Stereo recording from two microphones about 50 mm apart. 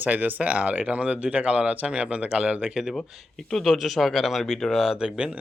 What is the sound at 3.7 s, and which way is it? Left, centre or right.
Speech, centre.